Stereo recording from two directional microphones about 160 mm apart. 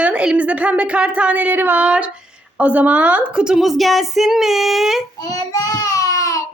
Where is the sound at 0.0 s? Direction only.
5° right (ahead or behind).